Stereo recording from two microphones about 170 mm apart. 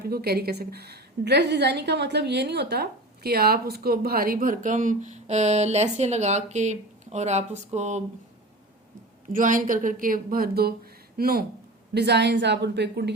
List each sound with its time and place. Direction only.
0.0 s a woman's voice: 65° right (ahead or behind); by 8.0 s 40° right (ahead or behind)
9.3 s a woman's voice: 50° right (ahead or behind)
11.9 s a woman's voice: 80° right